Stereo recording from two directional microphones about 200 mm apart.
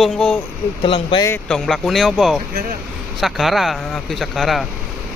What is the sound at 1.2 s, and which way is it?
Speech, 5° left (ahead or behind).